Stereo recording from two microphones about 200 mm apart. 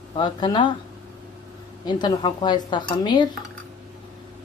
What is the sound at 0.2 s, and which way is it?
Speech, 20° left (ahead or behind).